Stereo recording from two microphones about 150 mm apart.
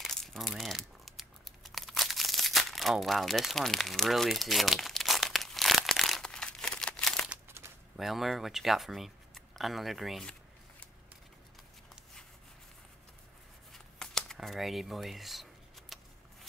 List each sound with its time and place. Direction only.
0.0 s crumpling: centre (ahead or behind)
7.2 s crumpling: 15° right (ahead or behind)
7.9 s speech: centre (ahead or behind)
13.7 s shuffling cards: 5° left (ahead or behind)